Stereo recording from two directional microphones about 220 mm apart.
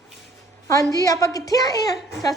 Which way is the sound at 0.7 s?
15° left (ahead or behind).